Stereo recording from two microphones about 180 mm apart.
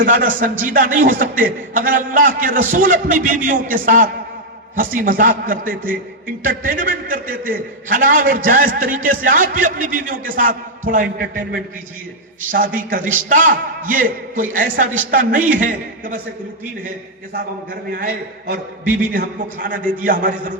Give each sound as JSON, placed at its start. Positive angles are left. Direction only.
{"t": 0.0, "sound": "a man's voice", "side_deg": -50}
{"t": 17.9, "sound": "a man's voice", "side_deg": -55}